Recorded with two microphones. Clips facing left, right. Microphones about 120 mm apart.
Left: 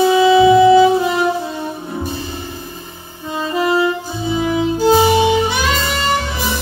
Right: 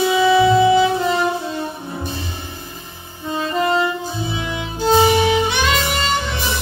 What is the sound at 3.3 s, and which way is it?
Saxophone, 5° left (ahead or behind).